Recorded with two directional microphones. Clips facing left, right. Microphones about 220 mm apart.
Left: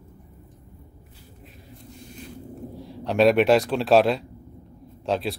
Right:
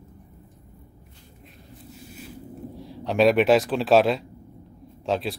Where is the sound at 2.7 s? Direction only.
Centre (ahead or behind).